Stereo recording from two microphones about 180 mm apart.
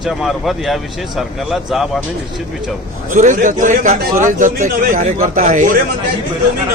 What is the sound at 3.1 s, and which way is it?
A man's voice, 45° right (ahead or behind).